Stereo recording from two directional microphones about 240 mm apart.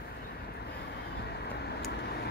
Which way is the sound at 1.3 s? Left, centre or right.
Left.